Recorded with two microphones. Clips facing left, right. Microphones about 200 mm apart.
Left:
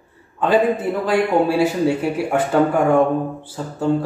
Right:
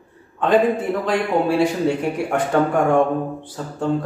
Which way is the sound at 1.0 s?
5° left (ahead or behind).